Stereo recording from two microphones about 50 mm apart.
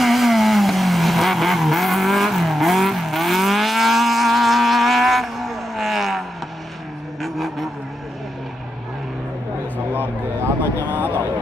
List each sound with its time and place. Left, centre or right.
0.0 s vehicle: centre
10.9 s vehicle: right